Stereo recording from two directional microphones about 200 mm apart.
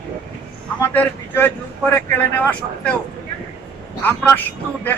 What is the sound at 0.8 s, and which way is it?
Speech, 10° left (ahead or behind).